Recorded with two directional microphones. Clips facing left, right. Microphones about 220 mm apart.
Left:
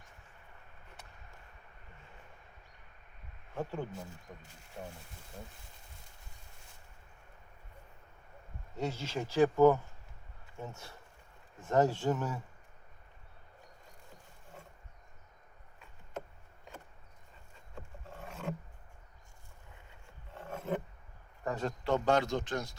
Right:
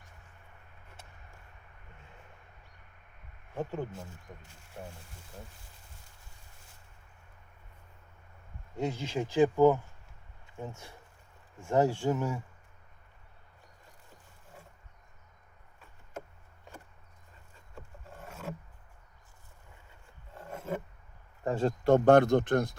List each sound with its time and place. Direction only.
3.5 s speech: 15° right (ahead or behind)
8.7 s speech: 15° right (ahead or behind)
18.3 s roaring cats: 5° right (ahead or behind)
20.3 s a sound: 10° right (ahead or behind)
21.4 s a sound: 30° right (ahead or behind)
21.8 s speech: 55° right (ahead or behind)